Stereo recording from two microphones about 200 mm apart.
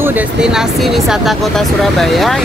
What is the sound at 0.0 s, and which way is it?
Speech, 10° right (ahead or behind).